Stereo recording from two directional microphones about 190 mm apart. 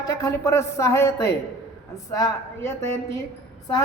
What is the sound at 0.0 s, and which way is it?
A woman's voice, 20° left (ahead or behind).